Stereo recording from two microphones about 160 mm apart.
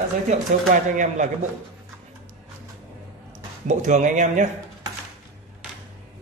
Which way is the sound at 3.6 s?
50° right (ahead or behind).